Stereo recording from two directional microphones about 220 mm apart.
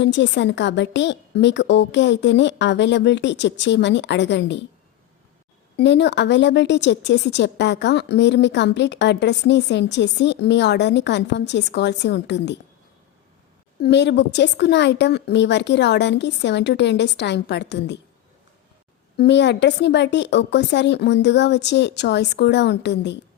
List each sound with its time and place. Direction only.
0.0 s a woman's voice: 55° left (ahead or behind)
5.7 s a woman's voice: 50° left (ahead or behind)
13.8 s a woman's voice: 50° left (ahead or behind)
19.1 s a woman's voice: 50° left (ahead or behind)